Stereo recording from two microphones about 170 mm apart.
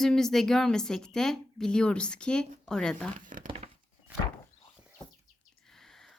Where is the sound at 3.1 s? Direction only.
50° right (ahead or behind).